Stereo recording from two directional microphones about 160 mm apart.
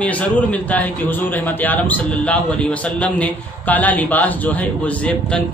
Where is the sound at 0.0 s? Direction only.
10° left (ahead or behind).